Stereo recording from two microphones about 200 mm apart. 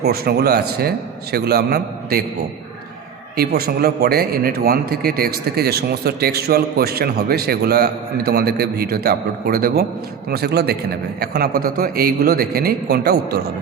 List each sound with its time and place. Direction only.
0.0 s a man's voice: 50° right (ahead or behind)
3.3 s a man's voice: 50° right (ahead or behind)